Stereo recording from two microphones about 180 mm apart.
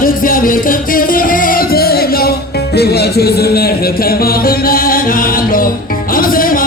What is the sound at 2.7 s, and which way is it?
Speech, 65° left (ahead or behind).